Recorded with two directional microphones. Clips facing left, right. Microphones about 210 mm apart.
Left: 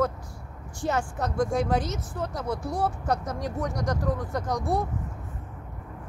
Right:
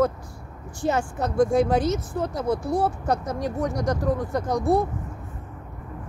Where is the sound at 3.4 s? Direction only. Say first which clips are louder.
Right 4 dB; 5° right (ahead or behind).